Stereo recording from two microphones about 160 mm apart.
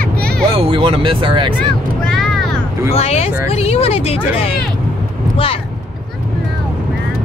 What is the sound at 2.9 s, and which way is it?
Speech, 40° left (ahead or behind).